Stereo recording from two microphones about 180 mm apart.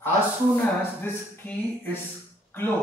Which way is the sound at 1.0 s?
10° left (ahead or behind).